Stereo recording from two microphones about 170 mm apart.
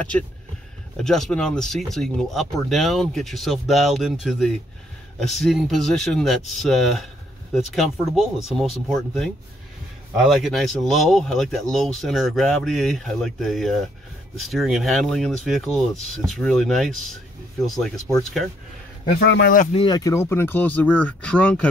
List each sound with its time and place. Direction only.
0.9 s speech: 5° left (ahead or behind)
19.1 s speech: 70° left (ahead or behind)
19.7 s speech: 30° left (ahead or behind)
20.0 s speech: 15° left (ahead or behind)